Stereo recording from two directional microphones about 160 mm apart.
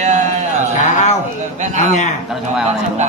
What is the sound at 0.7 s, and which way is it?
Speech, 50° left (ahead or behind).